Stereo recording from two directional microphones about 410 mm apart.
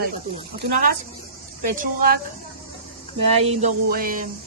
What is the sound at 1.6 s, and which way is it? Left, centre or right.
Speech, centre.